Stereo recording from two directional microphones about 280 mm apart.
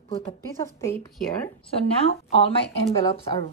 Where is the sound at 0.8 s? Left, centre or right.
Centre.